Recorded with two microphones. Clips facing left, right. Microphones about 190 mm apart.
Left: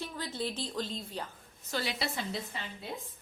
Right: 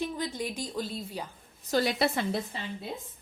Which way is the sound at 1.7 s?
50° right (ahead or behind).